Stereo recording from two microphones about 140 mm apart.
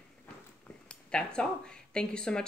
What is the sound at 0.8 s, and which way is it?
Speech, 5° left (ahead or behind).